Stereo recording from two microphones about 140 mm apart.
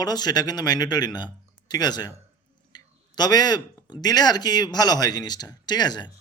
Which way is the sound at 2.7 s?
30° left (ahead or behind).